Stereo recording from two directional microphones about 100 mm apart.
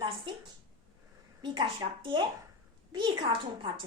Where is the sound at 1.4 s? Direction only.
50° right (ahead or behind).